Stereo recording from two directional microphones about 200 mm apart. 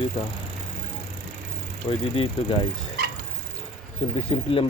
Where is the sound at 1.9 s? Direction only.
25° left (ahead or behind).